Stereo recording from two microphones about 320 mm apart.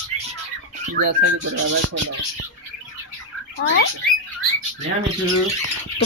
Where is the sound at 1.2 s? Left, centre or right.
Right.